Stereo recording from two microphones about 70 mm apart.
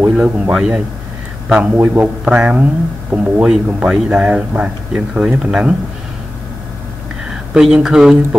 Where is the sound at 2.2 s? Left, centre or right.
Centre.